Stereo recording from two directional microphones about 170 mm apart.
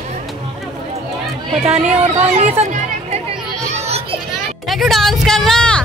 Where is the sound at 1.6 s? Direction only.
40° right (ahead or behind).